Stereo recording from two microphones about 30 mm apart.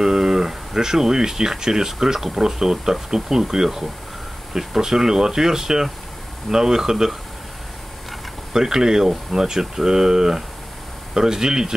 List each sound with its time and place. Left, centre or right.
0.0 s a sound: centre
0.7 s speech: centre
8.5 s speech: centre